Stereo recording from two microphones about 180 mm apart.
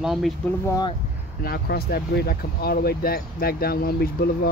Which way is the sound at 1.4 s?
60° left (ahead or behind).